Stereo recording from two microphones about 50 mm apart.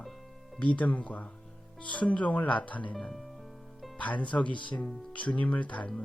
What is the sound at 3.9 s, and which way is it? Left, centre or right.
Speech, left.